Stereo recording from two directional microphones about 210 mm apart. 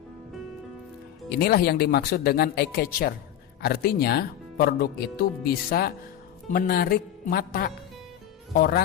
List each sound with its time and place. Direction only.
1.3 s speech: 50° left (ahead or behind)